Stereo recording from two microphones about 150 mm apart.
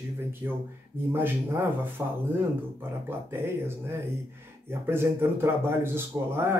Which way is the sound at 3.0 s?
15° right (ahead or behind).